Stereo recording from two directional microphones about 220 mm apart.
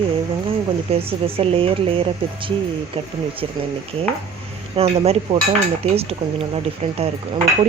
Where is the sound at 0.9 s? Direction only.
25° right (ahead or behind).